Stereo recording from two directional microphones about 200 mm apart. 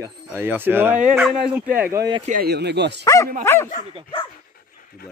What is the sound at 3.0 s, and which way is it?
Speech, 15° left (ahead or behind).